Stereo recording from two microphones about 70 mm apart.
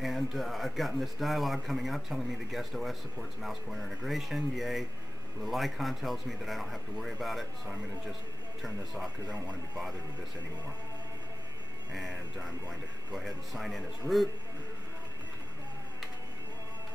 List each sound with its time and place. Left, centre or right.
0.0 s speech: centre
8.6 s speech: centre
12.1 s speech: right
13.1 s speech: centre